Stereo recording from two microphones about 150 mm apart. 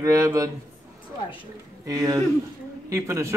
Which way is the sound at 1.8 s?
25° right (ahead or behind).